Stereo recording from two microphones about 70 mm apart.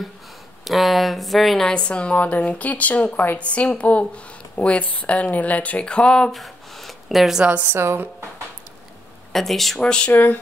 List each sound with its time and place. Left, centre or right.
0.7 s speech: centre
1.7 s speech: centre
6.3 s a sound: centre
7.6 s a woman's voice: right
9.3 s speech: centre
9.8 s speech: centre
10.1 s speech: left